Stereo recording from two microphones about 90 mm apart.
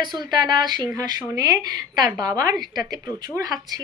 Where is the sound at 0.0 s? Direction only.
55° right (ahead or behind).